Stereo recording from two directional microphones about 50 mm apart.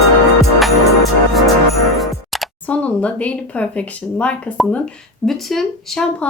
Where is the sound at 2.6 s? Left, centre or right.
Left.